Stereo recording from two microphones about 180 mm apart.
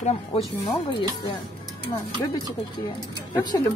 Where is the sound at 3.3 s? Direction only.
25° left (ahead or behind).